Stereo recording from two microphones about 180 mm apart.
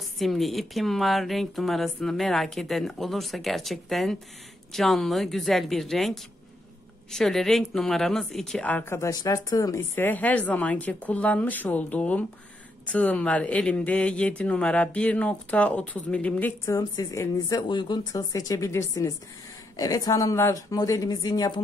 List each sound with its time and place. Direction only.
0.2 s speech: centre (ahead or behind); by 21.5 s 20° left (ahead or behind)